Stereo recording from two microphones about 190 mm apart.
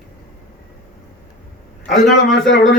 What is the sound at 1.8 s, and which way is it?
Speech, 45° left (ahead or behind).